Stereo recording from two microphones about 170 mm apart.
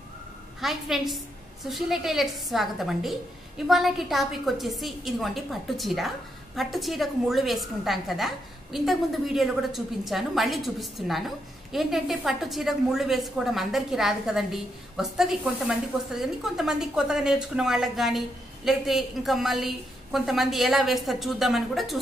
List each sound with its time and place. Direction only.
0.6 s a woman's voice: centre (ahead or behind)